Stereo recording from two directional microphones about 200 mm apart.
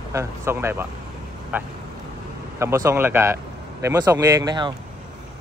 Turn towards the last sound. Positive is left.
turn(degrees=-20)  # may be behind; listen again after turning